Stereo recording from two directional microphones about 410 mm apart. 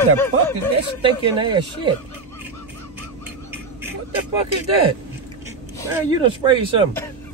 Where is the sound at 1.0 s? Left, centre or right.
Centre.